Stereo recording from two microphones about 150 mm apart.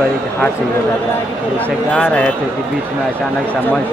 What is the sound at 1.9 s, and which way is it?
Speech, 10° left (ahead or behind).